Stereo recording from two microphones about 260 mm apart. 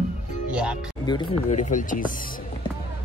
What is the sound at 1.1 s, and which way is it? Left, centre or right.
Speech, left.